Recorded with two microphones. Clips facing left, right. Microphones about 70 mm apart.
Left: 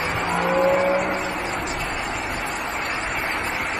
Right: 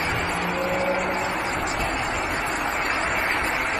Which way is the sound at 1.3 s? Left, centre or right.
Centre.